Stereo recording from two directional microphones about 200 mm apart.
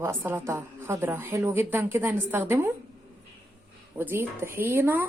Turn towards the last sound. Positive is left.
turn(degrees=-10)  # may be behind; listen again after turning